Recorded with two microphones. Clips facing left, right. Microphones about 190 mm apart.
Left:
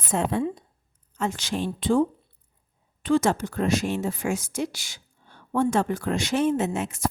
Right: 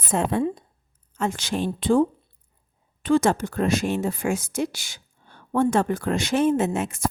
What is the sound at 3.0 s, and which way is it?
Speech, 55° right (ahead or behind).